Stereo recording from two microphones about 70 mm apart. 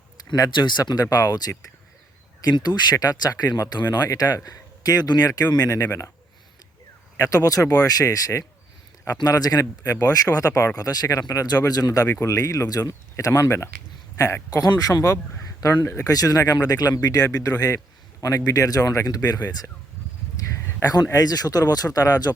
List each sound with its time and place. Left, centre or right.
0.3 s speech: left
1.1 s speech: left
2.4 s speech: left
4.1 s speech: left
7.2 s speech: left
9.1 s speech: left
10.8 s speech: left
12.2 s speech: left
12.9 s speech: left
14.5 s speech: left
15.7 s speech: left
16.0 s speech: left
20.8 s speech: left